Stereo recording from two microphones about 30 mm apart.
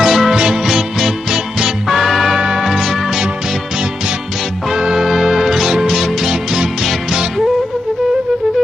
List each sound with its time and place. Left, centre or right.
0.0 s music: centre
0.3 s music: right; by 2.3 s centre
2.3 s music: centre
4.7 s music: centre